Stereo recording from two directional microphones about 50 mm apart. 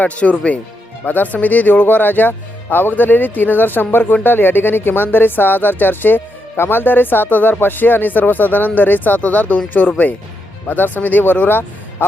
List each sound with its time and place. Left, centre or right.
0.0 s speech: left